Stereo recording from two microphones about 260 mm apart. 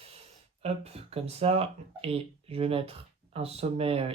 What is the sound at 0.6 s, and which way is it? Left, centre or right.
Speech, right.